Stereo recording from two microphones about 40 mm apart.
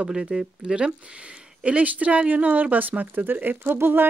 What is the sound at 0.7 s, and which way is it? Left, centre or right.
Speech, right.